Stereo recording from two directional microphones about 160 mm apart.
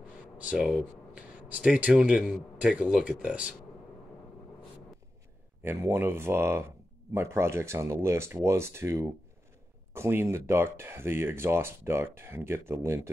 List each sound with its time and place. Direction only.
0.4 s speech: 5° right (ahead or behind)
5.6 s speech: 15° right (ahead or behind)